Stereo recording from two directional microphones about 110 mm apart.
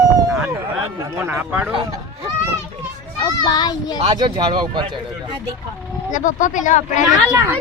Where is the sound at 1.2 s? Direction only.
15° right (ahead or behind).